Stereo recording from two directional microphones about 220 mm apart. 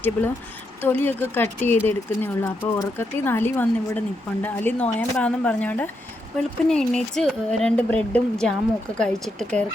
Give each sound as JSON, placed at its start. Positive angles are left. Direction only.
{"t": 0.8, "sound": "speech", "side_deg": 10}